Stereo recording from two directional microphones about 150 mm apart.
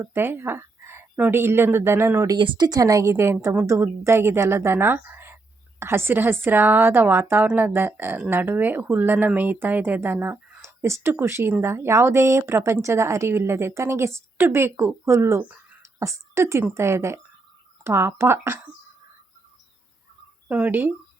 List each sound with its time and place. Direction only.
0.0 s speech: 15° right (ahead or behind)
20.5 s speech: 10° right (ahead or behind)